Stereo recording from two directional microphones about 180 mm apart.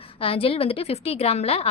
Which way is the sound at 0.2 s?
30° left (ahead or behind).